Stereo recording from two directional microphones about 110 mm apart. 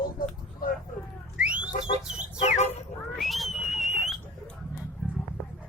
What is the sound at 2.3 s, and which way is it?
Speech, 90° left.